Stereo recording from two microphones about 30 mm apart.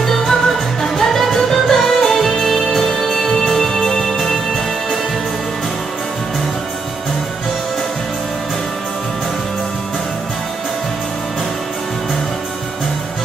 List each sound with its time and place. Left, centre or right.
0.0 s music: centre